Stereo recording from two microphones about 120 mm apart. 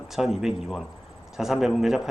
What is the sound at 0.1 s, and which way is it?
Speech, centre (ahead or behind).